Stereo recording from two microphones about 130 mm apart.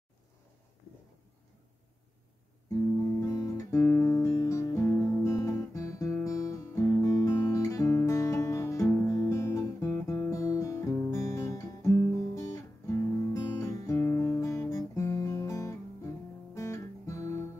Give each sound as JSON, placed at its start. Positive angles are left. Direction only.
{"t": 3.2, "sound": "guitar", "side_deg": 25}